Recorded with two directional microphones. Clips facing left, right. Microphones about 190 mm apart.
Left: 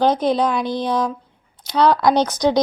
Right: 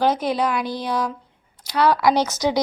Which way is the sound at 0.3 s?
5° right (ahead or behind).